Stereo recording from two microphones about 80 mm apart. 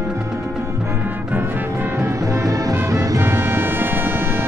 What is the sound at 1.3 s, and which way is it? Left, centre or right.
Music, right.